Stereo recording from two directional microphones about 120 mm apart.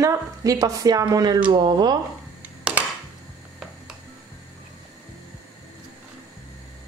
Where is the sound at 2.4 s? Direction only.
10° right (ahead or behind).